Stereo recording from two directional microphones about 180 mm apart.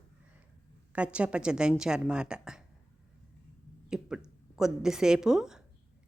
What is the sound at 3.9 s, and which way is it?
A woman's voice, 5° right (ahead or behind).